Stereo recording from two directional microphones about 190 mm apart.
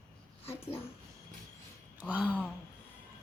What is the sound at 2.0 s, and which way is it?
Speech, 5° right (ahead or behind).